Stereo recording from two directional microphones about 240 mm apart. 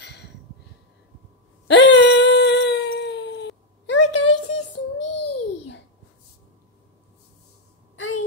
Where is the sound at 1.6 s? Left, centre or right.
Left.